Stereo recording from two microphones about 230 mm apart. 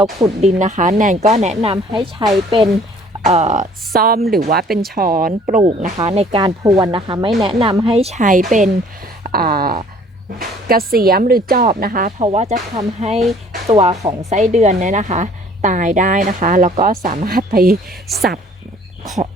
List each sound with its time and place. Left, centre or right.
0.0 s speech: centre
0.6 s speech: right
14.0 s a woman's voice: centre
14.3 s speech: right